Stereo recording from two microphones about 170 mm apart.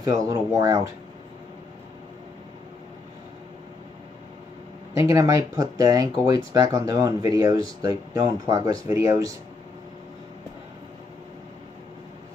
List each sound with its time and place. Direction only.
0.0 s speech: 20° right (ahead or behind)
4.9 s speech: 20° right (ahead or behind)